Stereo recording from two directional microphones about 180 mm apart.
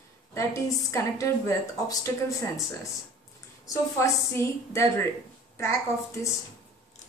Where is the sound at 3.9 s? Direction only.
15° left (ahead or behind).